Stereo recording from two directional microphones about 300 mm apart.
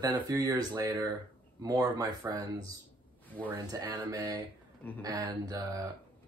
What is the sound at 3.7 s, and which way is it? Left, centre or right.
Speech, centre.